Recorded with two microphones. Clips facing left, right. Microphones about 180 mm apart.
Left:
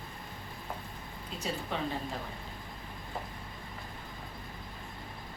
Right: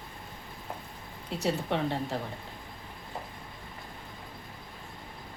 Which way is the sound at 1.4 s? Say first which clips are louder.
Right 6 dB; 70° right (ahead or behind).